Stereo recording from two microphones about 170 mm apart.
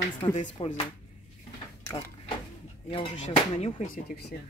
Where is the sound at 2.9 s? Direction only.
35° left (ahead or behind).